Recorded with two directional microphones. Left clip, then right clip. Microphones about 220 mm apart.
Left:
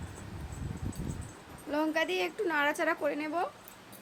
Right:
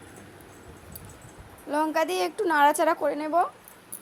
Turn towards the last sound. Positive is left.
turn(degrees=-20)  # may be behind; listen again after turning